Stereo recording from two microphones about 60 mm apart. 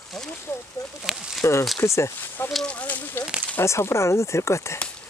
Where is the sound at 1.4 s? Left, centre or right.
Left.